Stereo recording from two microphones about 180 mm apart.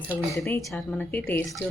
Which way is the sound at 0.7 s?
5° left (ahead or behind).